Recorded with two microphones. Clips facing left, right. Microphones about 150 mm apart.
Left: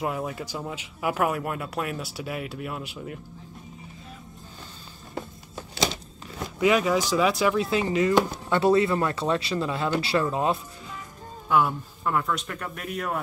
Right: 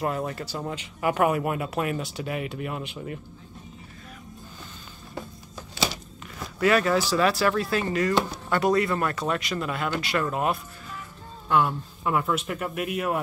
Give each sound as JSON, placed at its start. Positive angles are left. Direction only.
{"t": 0.0, "sound": "speech", "side_deg": 5}
{"t": 6.6, "sound": "speech", "side_deg": 15}
{"t": 11.4, "sound": "speech", "side_deg": 10}
{"t": 12.0, "sound": "speech", "side_deg": -5}